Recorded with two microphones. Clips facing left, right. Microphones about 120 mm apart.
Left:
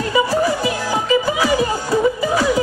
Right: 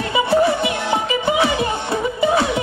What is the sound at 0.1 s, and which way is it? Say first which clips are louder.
Music: right 2 dB; 25° right (ahead or behind).